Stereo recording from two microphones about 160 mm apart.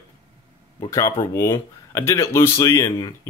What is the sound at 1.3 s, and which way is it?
Speech, 20° left (ahead or behind).